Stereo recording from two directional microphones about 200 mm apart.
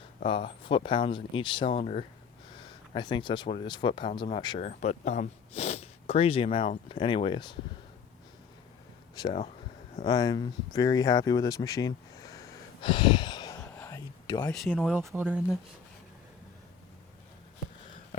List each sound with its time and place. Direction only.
0.3 s speech: 25° left (ahead or behind)
4.7 s speech: 35° left (ahead or behind)
9.2 s speech: 20° left (ahead or behind)
10.1 s a sound: 20° left (ahead or behind)
14.5 s speech: centre (ahead or behind)
14.9 s speech: 10° right (ahead or behind)